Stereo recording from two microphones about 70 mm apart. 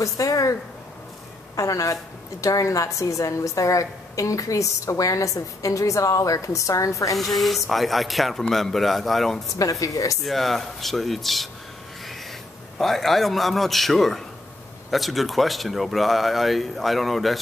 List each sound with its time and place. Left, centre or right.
0.0 s a woman's voice: left
1.6 s a woman's voice: left
7.2 s speech: centre
9.6 s a woman's voice: left
10.2 s speech: centre
12.7 s speech: centre